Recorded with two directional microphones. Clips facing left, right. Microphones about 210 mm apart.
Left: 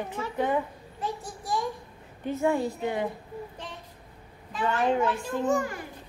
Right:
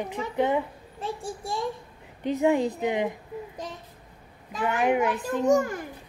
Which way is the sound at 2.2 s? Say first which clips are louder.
Right 3 dB; 15° right (ahead or behind).